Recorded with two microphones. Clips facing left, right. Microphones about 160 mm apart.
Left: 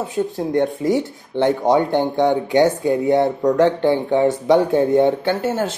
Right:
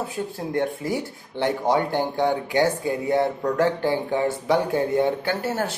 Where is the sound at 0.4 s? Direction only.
20° left (ahead or behind).